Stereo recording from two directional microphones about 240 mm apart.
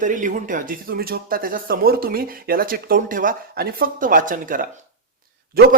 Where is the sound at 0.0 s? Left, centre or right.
Right.